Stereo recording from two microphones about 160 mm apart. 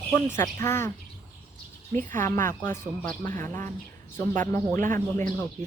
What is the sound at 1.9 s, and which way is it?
Speech, 15° left (ahead or behind).